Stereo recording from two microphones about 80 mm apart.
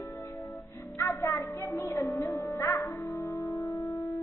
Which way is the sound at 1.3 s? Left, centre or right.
Left.